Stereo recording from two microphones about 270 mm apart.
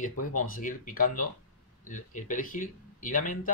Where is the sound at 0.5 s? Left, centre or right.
Left.